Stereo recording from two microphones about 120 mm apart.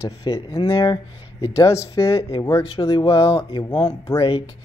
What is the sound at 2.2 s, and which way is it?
Speech, 50° left (ahead or behind).